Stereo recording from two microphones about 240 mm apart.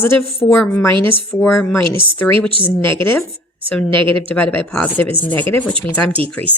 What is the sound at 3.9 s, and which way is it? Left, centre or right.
Speech, right.